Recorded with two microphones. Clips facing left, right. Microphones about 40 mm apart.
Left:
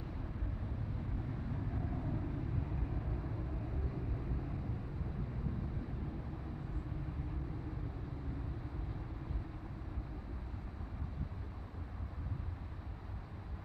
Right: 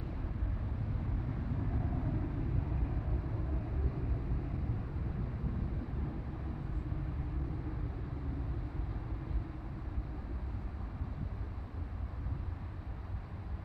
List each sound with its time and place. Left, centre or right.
2.0 s vehicle: right